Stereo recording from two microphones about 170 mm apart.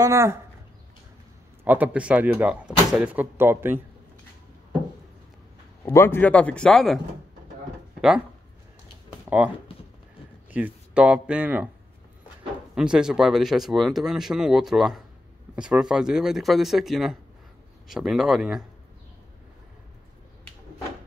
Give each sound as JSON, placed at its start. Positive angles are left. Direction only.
{"t": 0.0, "sound": "speech", "side_deg": -15}
{"t": 1.6, "sound": "speech", "side_deg": -10}
{"t": 5.9, "sound": "speech", "side_deg": 15}
{"t": 10.5, "sound": "speech", "side_deg": -10}
{"t": 12.7, "sound": "speech", "side_deg": -5}